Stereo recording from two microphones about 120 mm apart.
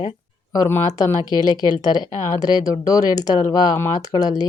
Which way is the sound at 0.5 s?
20° left (ahead or behind).